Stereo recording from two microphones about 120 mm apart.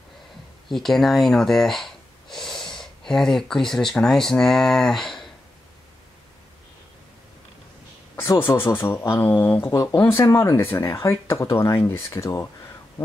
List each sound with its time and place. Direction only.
0.7 s speech: centre (ahead or behind)
8.2 s speech: 20° left (ahead or behind)
9.7 s speech: 30° left (ahead or behind)